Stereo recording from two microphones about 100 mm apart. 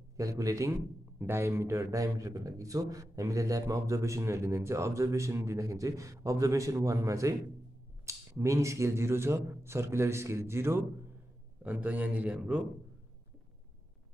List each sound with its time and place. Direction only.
0.2 s a man's voice: 35° right (ahead or behind); by 12.6 s 10° right (ahead or behind)